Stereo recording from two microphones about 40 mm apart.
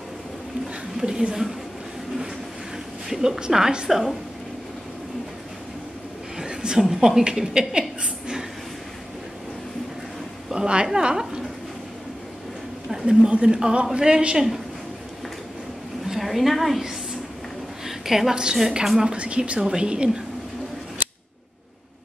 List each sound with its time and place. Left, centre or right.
0.9 s a woman's voice: centre
3.1 s a woman's voice: centre
3.9 s a woman's voice: centre
6.3 s a sound: centre
6.8 s a woman's voice: centre
10.5 s speech: right
12.9 s speech: centre
16.1 s a woman's voice: centre
17.8 s a sound: centre
18.3 s a woman's voice: centre
19.1 s speech: right